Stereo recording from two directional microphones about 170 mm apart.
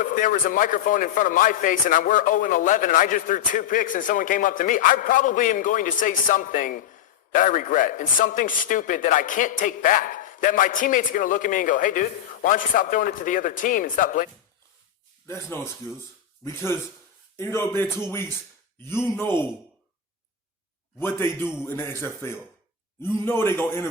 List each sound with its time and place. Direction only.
0.0 s a man's voice: 50° left (ahead or behind)
15.3 s speech: 15° left (ahead or behind)
21.0 s speech: 15° left (ahead or behind)